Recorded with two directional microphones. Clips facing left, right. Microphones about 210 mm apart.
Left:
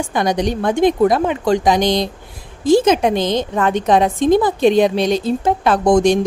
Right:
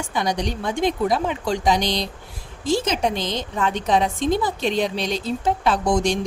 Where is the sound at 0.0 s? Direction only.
55° left (ahead or behind).